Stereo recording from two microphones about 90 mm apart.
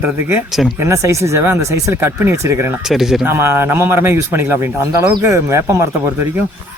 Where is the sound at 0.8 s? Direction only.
35° right (ahead or behind).